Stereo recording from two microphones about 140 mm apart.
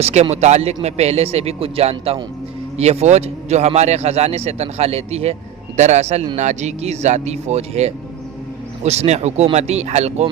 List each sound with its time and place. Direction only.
0.0 s a man's voice: 50° right (ahead or behind)